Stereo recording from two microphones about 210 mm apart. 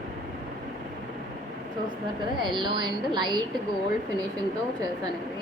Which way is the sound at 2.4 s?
20° right (ahead or behind).